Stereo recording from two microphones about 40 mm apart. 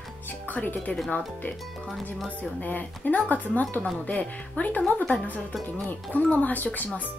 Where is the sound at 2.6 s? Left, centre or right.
Left.